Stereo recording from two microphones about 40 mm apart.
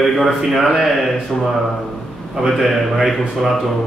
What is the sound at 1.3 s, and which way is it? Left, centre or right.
Speech, centre.